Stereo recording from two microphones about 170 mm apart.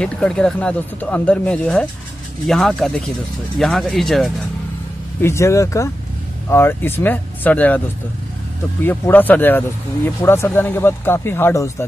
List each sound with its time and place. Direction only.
0.0 s speech: 5° left (ahead or behind)
5.2 s speech: 15° left (ahead or behind)
8.8 s speech: 10° left (ahead or behind)